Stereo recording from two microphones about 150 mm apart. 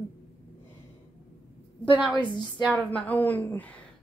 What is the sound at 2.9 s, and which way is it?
Speech, 10° left (ahead or behind).